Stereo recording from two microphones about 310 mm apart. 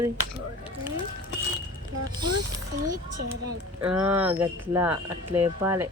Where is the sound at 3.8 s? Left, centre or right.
Centre.